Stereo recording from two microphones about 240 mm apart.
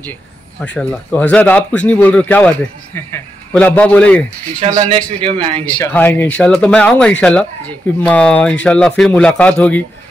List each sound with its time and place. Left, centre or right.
0.7 s a man's voice: centre
4.6 s speech: right
5.7 s a man's voice: centre